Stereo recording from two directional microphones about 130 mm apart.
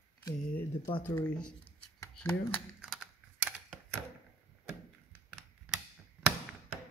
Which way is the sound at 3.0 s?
10° right (ahead or behind).